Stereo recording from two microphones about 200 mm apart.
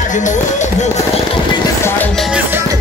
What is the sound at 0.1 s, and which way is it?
Speech, 40° left (ahead or behind).